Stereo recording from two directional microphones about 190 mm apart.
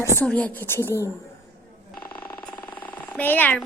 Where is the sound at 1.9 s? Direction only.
10° left (ahead or behind).